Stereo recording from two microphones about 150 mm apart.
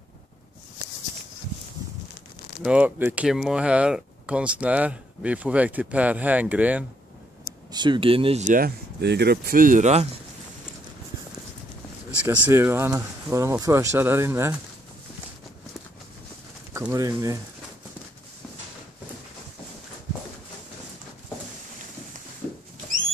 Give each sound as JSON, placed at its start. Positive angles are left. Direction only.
{"t": 2.6, "sound": "speech", "side_deg": -10}
{"t": 7.7, "sound": "speech", "side_deg": -30}
{"t": 8.5, "sound": "speech", "side_deg": -80}
{"t": 12.1, "sound": "speech", "side_deg": -10}
{"t": 16.9, "sound": "speech", "side_deg": -25}